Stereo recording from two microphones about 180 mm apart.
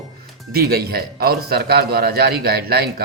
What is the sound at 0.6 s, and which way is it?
A man's voice, 55° right (ahead or behind).